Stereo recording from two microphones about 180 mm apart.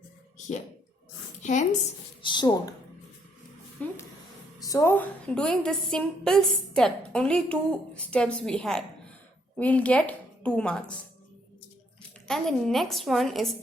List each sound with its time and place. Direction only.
0.3 s a sound: 40° left (ahead or behind)
1.4 s a woman's voice: 40° left (ahead or behind)
2.2 s speech: 25° left (ahead or behind)
3.8 s a woman's voice: 10° left (ahead or behind)
12.3 s a woman's voice: centre (ahead or behind)